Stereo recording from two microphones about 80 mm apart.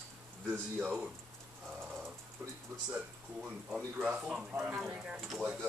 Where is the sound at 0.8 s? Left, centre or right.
Centre.